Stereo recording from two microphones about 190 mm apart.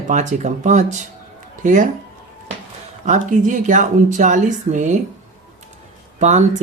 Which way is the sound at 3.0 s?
40° right (ahead or behind).